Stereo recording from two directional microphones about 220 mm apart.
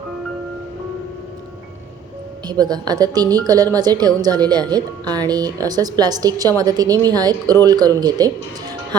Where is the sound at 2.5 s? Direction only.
20° right (ahead or behind).